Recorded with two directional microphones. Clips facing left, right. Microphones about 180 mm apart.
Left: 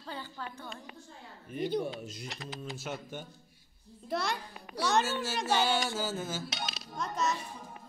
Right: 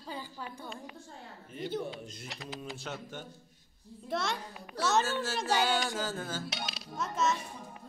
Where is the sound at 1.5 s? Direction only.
15° left (ahead or behind).